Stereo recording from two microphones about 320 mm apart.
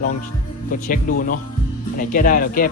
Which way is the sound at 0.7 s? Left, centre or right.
Left.